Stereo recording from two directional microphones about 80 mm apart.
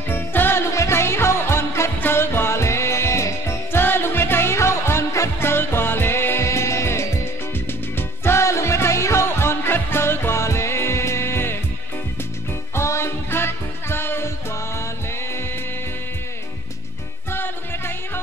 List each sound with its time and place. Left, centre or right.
0.1 s music: left
12.7 s music: left
17.3 s music: left